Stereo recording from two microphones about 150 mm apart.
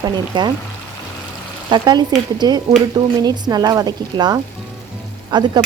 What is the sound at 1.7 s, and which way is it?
Stir, 30° right (ahead or behind).